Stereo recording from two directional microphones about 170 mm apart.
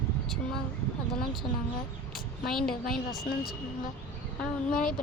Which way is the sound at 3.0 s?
60° left (ahead or behind).